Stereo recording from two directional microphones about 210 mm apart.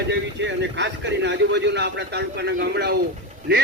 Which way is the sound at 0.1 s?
55° right (ahead or behind).